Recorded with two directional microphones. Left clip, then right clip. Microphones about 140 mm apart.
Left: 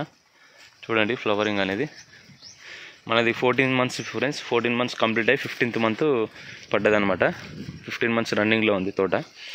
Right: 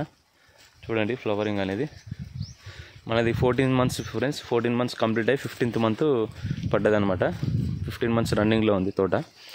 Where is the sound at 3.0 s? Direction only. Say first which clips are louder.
Left 3 dB; 40° right (ahead or behind).